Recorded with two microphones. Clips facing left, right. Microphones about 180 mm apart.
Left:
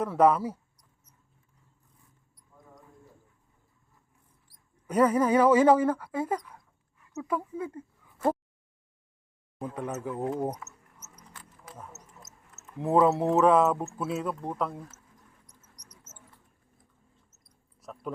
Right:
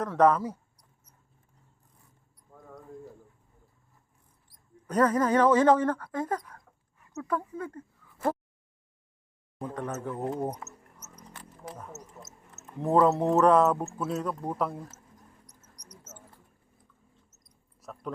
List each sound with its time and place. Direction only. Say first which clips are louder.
0.0 s speech: even; 10° left (ahead or behind)
2.5 s a sound: right 5 dB; 65° right (ahead or behind)
4.9 s speech: left 1 dB; 10° left (ahead or behind)
9.6 s speech: even; 10° left (ahead or behind)
12.8 s speech: even; 5° left (ahead or behind)
17.7 s a sound: left 1 dB; centre (ahead or behind)